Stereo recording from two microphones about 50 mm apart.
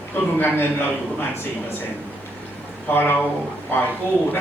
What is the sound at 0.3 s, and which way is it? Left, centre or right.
Speech, left.